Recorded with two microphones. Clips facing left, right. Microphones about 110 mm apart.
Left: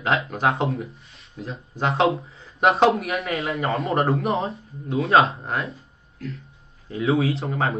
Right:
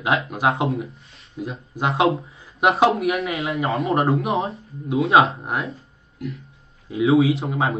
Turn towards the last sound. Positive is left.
turn(degrees=0)  # may be behind; listen again after turning